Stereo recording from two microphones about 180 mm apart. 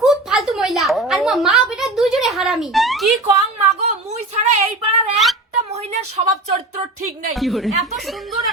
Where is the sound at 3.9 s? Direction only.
40° right (ahead or behind).